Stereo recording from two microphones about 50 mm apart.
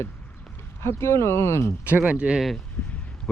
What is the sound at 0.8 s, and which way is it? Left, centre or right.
Speech, left.